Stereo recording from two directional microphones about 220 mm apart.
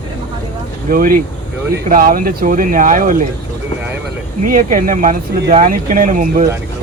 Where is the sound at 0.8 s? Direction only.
40° right (ahead or behind).